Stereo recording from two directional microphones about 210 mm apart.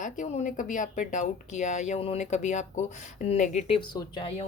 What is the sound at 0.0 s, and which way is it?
Speech, 35° left (ahead or behind).